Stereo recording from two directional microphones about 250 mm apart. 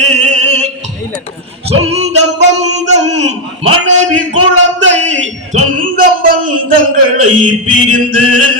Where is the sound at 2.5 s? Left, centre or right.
Right.